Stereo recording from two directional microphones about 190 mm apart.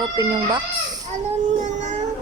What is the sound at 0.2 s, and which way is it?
Speech, 20° right (ahead or behind).